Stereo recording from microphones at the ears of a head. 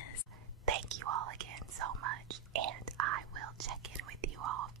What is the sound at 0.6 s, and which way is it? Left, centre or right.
Whispering, right.